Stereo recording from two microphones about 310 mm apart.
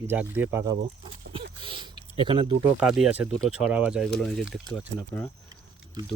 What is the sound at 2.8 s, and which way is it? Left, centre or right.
Speech, centre.